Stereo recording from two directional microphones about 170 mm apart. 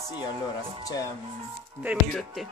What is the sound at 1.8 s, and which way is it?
Speech, centre (ahead or behind).